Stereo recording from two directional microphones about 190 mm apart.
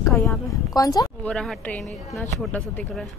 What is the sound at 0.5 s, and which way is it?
Speech, 20° left (ahead or behind).